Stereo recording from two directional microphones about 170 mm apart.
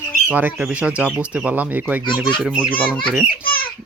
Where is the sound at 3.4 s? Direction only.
60° left (ahead or behind).